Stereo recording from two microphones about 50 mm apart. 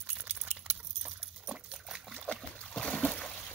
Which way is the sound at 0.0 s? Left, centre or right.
Right.